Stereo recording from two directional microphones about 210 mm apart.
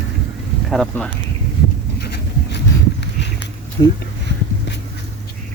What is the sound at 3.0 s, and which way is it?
Walk, 55° left (ahead or behind).